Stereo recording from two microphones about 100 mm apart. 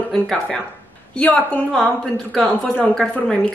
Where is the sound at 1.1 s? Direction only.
15° left (ahead or behind).